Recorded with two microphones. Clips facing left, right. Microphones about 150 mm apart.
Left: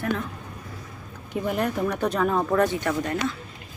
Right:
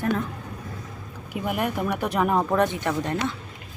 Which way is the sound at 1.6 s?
10° right (ahead or behind).